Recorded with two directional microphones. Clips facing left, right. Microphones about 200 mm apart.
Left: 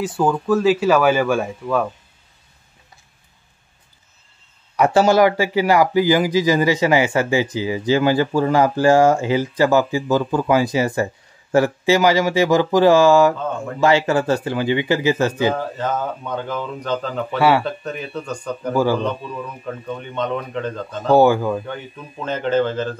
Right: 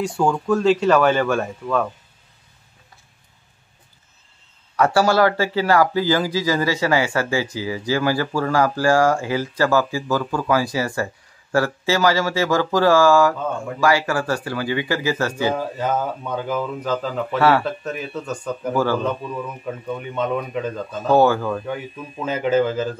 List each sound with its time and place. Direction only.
0.0 s speech: 5° left (ahead or behind)
4.7 s a man's voice: 20° left (ahead or behind)
15.5 s speech: 10° right (ahead or behind)
17.4 s speech: 10° left (ahead or behind)
17.6 s speech: centre (ahead or behind)
18.7 s speech: 10° left (ahead or behind)
18.9 s speech: 5° right (ahead or behind)
21.1 s speech: 15° left (ahead or behind)
21.6 s speech: 5° right (ahead or behind)